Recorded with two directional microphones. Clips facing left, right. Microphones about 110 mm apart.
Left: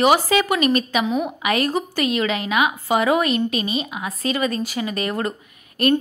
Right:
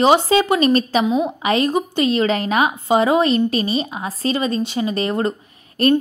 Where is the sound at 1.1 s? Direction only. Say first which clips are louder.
Right 3 dB; 20° right (ahead or behind).